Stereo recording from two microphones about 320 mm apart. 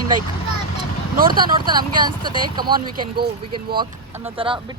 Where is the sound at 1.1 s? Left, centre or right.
Right.